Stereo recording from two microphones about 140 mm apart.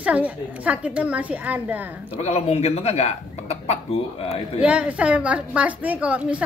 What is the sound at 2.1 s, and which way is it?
Speech, 50° left (ahead or behind).